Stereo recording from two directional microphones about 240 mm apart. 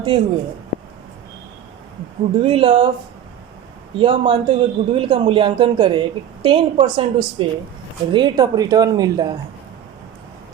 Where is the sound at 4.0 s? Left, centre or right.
Right.